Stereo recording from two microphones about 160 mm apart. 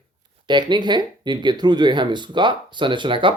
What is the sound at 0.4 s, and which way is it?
Speech, 30° right (ahead or behind).